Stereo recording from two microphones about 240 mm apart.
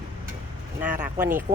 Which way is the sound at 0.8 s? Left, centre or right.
Centre.